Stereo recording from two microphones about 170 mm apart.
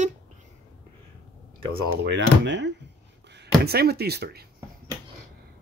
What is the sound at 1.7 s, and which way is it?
Speech, 90° right.